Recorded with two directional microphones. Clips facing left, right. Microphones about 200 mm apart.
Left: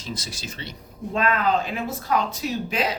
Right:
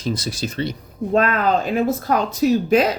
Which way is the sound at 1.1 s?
45° right (ahead or behind).